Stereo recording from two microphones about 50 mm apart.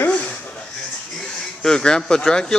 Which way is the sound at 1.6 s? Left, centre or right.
Centre.